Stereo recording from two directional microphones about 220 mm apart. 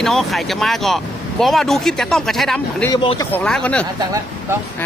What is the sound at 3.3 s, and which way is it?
Speech, 5° left (ahead or behind).